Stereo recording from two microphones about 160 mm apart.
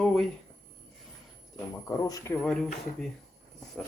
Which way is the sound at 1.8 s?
20° left (ahead or behind).